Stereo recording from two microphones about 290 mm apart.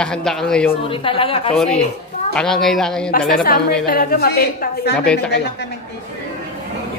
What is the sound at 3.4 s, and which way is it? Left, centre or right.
A woman's voice, left.